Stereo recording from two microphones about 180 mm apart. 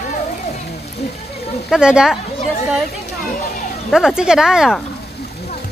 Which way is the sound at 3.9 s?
5° right (ahead or behind).